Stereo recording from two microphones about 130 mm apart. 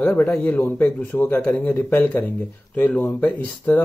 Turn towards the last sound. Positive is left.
turn(degrees=15)  # may be behind; listen again after turning